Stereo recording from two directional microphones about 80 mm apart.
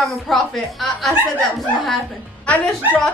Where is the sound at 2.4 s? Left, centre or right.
Centre.